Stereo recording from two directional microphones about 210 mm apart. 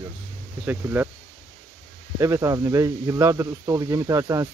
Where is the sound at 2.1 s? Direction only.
15° right (ahead or behind).